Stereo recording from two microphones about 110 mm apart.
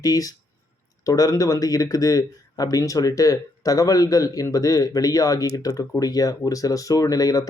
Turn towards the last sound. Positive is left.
turn(degrees=35)  # may be behind; listen again after turning